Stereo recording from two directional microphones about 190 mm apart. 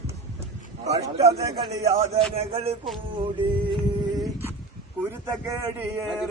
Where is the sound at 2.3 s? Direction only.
30° right (ahead or behind).